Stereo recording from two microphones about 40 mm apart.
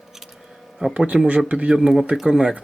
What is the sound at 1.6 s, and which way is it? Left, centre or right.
Speech, centre.